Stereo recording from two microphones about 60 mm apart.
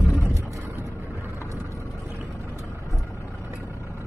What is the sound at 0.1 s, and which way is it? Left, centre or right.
Vehicle, left.